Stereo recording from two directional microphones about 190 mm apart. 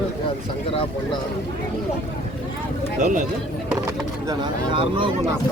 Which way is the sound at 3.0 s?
45° right (ahead or behind).